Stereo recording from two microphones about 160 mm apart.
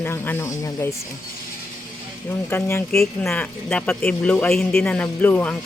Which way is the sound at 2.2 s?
15° left (ahead or behind).